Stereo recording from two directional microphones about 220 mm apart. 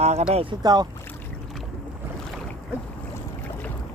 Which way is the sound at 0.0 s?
30° right (ahead or behind).